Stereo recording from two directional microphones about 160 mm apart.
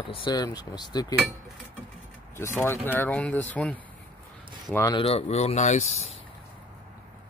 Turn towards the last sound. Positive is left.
turn(degrees=45)  # may be behind; listen again after turning